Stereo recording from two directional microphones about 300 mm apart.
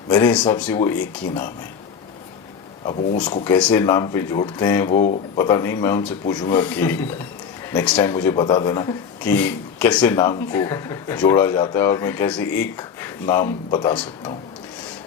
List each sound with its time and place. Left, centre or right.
0.1 s speech: centre
3.4 s speech: centre
4.9 s speech: left
5.4 s speech: centre